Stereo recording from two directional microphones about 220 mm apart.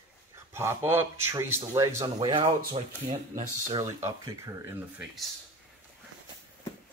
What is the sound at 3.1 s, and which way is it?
Speech, 35° right (ahead or behind).